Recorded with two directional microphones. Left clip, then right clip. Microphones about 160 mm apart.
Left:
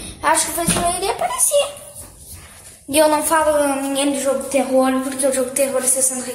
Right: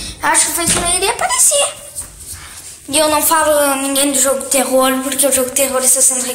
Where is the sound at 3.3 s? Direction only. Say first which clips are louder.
Right 3 dB; centre (ahead or behind).